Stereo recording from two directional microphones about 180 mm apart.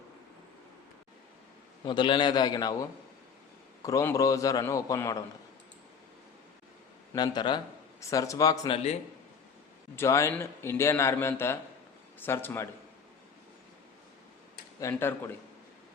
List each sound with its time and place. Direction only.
1.8 s a man's voice: 25° left (ahead or behind)
3.8 s a man's voice: 20° left (ahead or behind)
7.1 s a man's voice: 25° left (ahead or behind)
9.9 s a man's voice: 15° left (ahead or behind)
14.8 s a man's voice: 15° left (ahead or behind)